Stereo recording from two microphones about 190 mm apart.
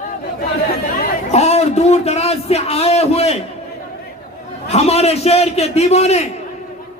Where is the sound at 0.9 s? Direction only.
35° left (ahead or behind).